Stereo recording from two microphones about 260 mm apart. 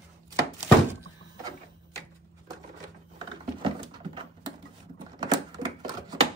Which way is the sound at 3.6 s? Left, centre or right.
Centre.